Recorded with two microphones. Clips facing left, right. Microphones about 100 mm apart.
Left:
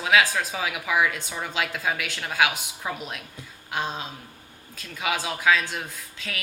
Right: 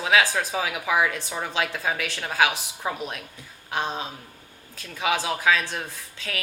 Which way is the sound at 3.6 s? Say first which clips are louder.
Right 2 dB; 30° right (ahead or behind).